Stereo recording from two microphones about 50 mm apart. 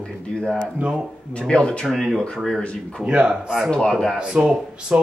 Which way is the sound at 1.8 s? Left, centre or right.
Centre.